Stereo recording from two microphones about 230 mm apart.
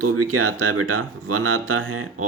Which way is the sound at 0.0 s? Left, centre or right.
Right.